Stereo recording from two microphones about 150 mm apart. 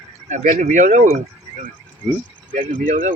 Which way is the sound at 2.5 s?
60° right (ahead or behind).